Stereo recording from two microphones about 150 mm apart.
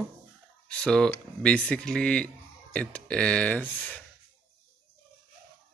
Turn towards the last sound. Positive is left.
turn(degrees=10)  # may be behind; listen again after turning